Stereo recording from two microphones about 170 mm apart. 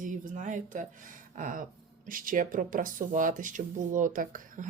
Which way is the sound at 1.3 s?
50° right (ahead or behind).